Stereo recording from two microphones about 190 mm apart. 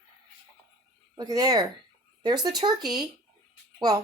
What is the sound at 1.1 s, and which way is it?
Speech, 20° right (ahead or behind).